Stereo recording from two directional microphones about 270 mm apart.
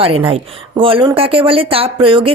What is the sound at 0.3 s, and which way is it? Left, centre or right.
Speech, right.